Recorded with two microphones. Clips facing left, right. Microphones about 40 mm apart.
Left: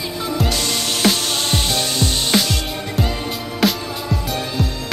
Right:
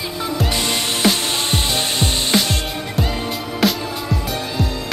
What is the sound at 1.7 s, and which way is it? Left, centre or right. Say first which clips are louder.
Music: even; right.